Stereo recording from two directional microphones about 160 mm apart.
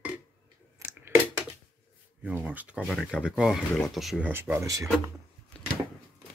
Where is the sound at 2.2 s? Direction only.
10° right (ahead or behind).